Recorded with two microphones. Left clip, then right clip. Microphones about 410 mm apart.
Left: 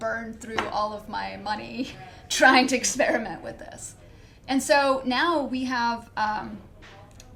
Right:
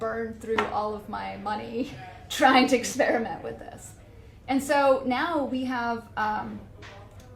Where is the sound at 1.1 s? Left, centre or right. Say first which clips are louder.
Left 1 dB; right.